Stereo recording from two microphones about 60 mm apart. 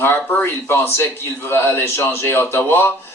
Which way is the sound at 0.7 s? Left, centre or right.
Left.